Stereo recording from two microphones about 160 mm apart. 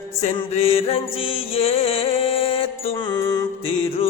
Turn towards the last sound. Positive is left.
turn(degrees=30)  # may be behind; listen again after turning